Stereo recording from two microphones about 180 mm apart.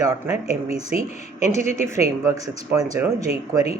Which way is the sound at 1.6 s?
40° left (ahead or behind).